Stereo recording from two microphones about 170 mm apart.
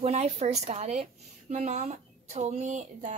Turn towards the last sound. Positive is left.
turn(degrees=-45)  # may be behind; listen again after turning